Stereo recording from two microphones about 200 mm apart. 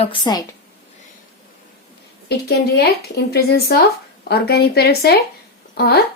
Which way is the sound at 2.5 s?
55° left (ahead or behind).